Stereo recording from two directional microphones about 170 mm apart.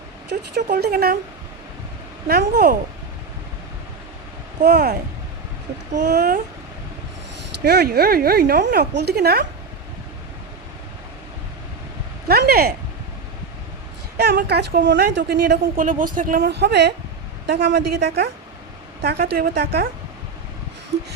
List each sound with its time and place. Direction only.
0.5 s speech: 75° right (ahead or behind)
2.2 s speech: 70° right (ahead or behind)
4.6 s speech: 75° right (ahead or behind)
7.6 s speech: 70° right (ahead or behind)
12.3 s speech: 65° right (ahead or behind)
14.2 s speech: 75° right (ahead or behind); by 16.5 s 55° right (ahead or behind)
16.5 s a woman's voice: 80° right
19.0 s speech: 70° right (ahead or behind)